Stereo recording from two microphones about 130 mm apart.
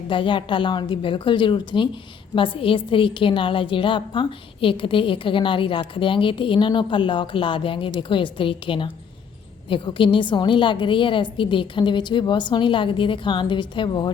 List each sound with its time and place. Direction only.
0.1 s a woman's voice: 40° left (ahead or behind)